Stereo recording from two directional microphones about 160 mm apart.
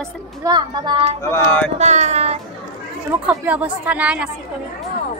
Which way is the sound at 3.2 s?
10° right (ahead or behind).